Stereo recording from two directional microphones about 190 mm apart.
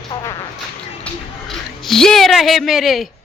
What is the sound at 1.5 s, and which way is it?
Speech, centre (ahead or behind).